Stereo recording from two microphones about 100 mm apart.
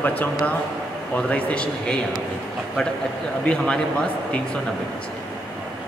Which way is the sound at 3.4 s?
10° left (ahead or behind).